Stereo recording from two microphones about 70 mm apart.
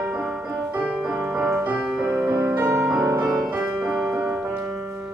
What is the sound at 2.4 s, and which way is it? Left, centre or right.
Music, right.